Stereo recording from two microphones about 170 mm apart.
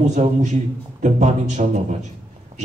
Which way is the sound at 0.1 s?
45° right (ahead or behind).